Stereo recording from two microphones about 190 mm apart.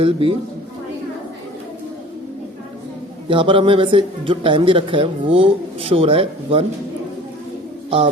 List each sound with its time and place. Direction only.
0.0 s speech: 30° right (ahead or behind)
3.2 s speech: 25° right (ahead or behind)